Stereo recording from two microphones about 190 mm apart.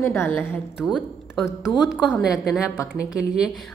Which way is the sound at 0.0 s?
15° left (ahead or behind).